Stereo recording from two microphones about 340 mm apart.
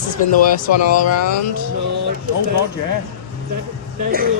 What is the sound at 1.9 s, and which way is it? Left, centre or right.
Speech, right.